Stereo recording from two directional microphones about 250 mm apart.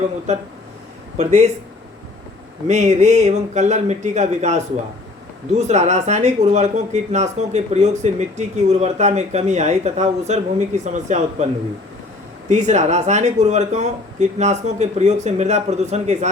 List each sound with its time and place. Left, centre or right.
1.1 s speech: right
2.6 s speech: right
12.5 s speech: right